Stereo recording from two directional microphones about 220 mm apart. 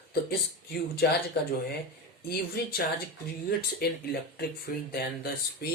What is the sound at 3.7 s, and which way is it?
Speech, 45° left (ahead or behind).